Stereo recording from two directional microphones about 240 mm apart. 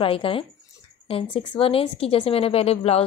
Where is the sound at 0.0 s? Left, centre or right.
Left.